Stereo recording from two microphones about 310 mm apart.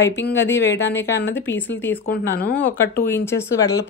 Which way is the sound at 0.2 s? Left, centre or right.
Left.